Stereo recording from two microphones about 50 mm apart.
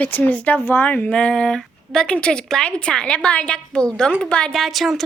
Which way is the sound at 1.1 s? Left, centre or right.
Centre.